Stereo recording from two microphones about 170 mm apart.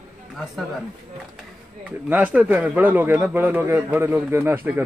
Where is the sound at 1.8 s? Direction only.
10° right (ahead or behind).